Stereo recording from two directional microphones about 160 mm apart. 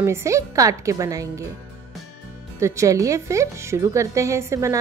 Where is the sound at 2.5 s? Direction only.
20° right (ahead or behind).